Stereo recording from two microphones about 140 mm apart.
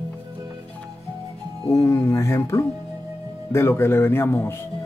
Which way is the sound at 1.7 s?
20° left (ahead or behind).